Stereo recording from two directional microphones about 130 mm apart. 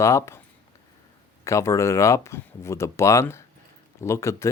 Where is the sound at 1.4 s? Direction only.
20° left (ahead or behind).